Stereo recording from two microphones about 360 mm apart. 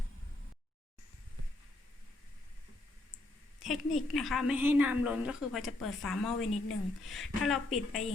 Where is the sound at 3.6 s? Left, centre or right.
Centre.